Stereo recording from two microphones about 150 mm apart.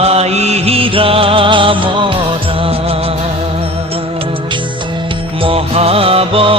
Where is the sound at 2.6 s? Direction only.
40° right (ahead or behind).